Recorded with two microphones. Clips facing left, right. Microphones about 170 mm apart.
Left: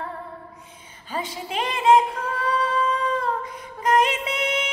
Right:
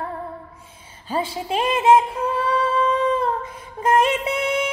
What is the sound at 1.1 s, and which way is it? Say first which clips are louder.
Female singing: right 5 dB; 25° right (ahead or behind).